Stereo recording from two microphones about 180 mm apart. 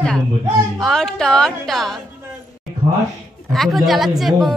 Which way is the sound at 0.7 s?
Centre (ahead or behind).